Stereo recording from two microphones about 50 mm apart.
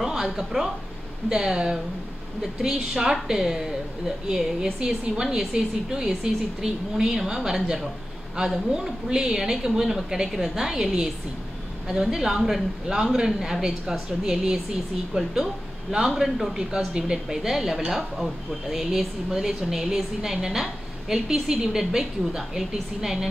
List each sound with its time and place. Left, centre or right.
0.0 s a woman's voice: centre